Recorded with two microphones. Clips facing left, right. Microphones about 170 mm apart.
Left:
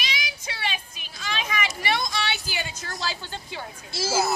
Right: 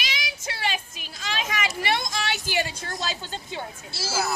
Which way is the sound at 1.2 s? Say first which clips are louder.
Even; 45° right (ahead or behind).